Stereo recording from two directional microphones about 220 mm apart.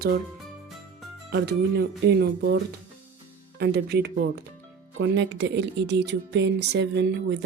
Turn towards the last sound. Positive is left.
turn(degrees=-50)  # may be behind; listen again after turning